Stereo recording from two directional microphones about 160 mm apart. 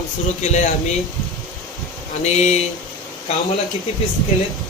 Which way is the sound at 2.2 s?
45° left (ahead or behind).